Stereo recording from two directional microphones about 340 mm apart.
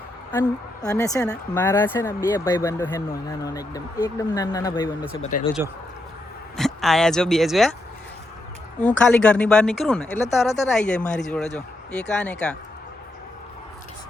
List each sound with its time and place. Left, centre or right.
0.3 s a woman's voice: centre
6.6 s speech: centre
8.8 s speech: centre